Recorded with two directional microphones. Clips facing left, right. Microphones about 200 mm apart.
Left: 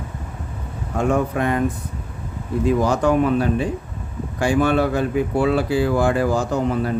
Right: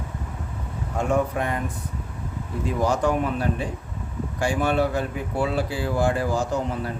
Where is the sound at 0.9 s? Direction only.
90° left.